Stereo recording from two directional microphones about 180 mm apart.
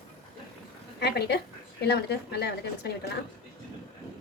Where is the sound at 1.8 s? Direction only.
65° left (ahead or behind).